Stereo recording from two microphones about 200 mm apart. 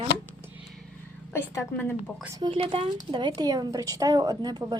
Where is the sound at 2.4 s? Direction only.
25° right (ahead or behind).